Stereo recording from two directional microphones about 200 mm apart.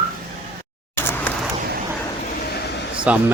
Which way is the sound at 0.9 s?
10° left (ahead or behind).